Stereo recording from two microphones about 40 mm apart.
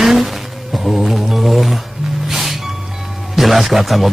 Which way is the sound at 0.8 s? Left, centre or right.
Centre.